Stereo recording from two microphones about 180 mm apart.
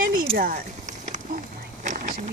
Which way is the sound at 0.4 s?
45° right (ahead or behind).